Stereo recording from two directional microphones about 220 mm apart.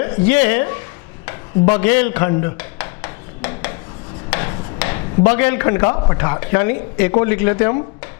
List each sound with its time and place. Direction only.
0.0 s a woman's voice: 15° left (ahead or behind)
1.8 s a man's voice: 15° left (ahead or behind)
2.6 s a sound: 15° left (ahead or behind)
4.3 s speech: 15° left (ahead or behind)